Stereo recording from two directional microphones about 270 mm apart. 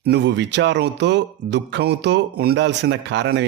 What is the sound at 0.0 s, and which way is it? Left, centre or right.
Speech, right.